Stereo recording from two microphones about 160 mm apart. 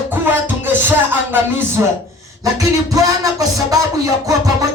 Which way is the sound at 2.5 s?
20° right (ahead or behind).